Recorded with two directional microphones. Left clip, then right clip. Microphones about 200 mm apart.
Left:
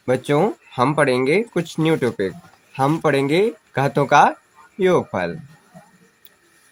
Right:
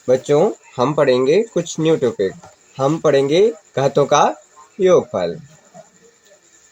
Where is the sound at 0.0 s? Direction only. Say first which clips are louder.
Right 4 dB; 25° left (ahead or behind).